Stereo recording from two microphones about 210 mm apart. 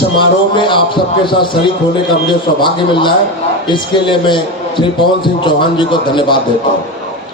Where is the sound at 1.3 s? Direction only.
20° left (ahead or behind).